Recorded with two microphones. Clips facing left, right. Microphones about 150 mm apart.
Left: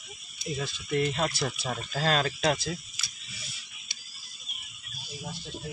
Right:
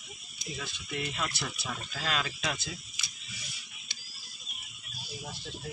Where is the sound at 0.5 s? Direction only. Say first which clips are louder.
Left 9 dB; 40° left (ahead or behind).